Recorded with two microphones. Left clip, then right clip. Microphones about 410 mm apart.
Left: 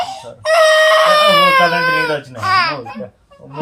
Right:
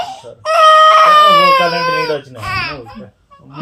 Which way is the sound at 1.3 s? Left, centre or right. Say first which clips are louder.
Right 1 dB; centre.